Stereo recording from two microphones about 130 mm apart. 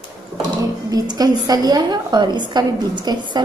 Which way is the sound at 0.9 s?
30° right (ahead or behind).